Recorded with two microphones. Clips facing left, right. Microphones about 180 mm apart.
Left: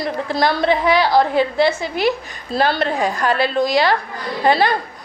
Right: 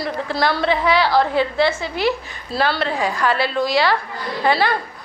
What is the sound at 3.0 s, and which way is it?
Speech, 45° left (ahead or behind).